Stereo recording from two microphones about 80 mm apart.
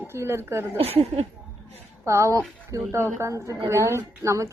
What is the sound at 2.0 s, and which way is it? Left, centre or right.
A woman's voice, right.